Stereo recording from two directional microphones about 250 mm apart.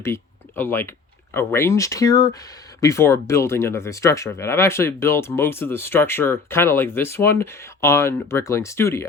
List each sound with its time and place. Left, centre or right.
0.0 s speech: centre